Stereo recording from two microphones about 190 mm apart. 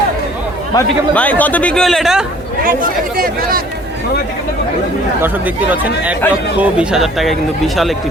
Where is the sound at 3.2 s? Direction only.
50° right (ahead or behind).